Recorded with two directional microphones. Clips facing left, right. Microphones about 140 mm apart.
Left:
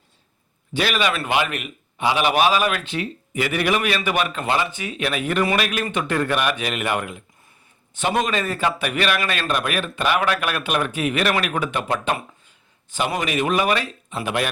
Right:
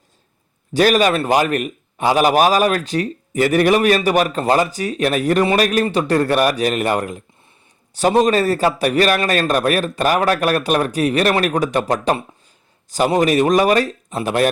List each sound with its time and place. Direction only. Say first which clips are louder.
0.7 s a man's voice: right 8 dB; 40° right (ahead or behind)